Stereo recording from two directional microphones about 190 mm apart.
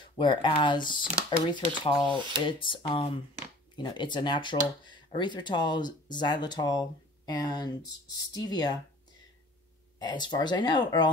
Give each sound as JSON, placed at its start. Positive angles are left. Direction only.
{"t": 0.0, "sound": "speech", "side_deg": 25}
{"t": 9.9, "sound": "speech", "side_deg": 25}